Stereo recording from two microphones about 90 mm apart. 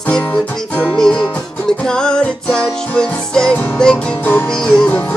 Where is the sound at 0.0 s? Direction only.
15° left (ahead or behind).